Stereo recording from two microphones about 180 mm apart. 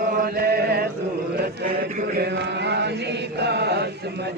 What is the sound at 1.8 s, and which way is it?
Chant, 55° right (ahead or behind).